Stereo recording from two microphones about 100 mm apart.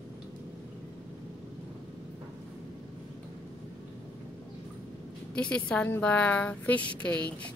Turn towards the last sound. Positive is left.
turn(degrees=15)  # may be behind; listen again after turning